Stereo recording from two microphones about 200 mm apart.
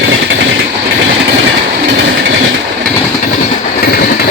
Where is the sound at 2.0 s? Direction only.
60° right (ahead or behind).